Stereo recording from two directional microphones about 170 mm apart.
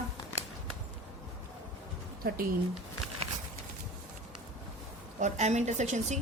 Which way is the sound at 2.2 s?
60° right (ahead or behind).